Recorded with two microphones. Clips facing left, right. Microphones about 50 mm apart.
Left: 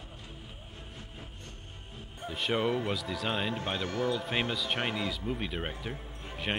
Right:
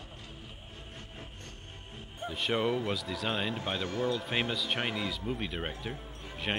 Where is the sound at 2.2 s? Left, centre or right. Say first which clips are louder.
Even; centre.